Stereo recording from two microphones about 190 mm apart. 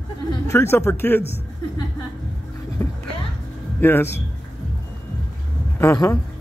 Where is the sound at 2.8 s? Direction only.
15° left (ahead or behind).